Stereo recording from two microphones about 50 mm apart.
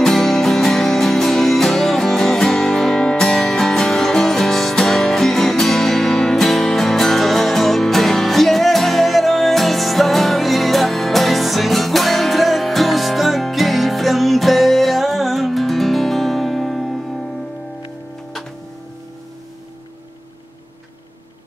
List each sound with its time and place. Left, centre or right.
0.0 s music: centre